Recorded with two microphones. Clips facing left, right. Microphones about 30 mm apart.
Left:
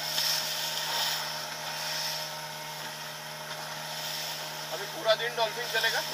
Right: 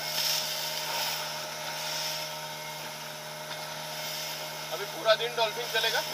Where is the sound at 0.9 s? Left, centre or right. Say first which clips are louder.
Left 2 dB; left.